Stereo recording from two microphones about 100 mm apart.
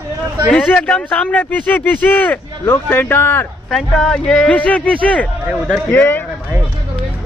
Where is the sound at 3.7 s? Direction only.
5° left (ahead or behind); by 6.2 s 20° left (ahead or behind).